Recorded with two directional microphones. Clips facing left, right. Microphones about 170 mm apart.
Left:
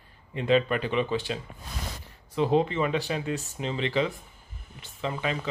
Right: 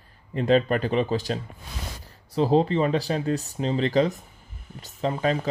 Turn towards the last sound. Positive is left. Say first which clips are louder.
# right 6 dB
turn(degrees=-40)  # may be behind; listen again after turning